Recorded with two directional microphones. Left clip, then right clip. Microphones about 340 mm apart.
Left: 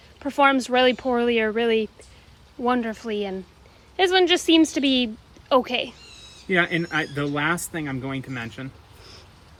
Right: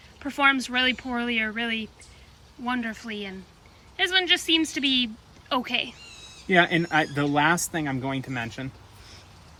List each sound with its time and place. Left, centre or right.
0.2 s speech: centre
6.5 s speech: centre